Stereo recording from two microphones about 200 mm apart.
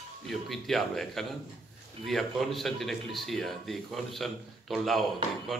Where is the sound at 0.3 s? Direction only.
Centre (ahead or behind).